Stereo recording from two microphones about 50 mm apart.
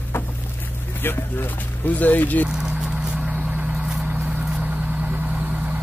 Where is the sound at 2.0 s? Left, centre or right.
Left.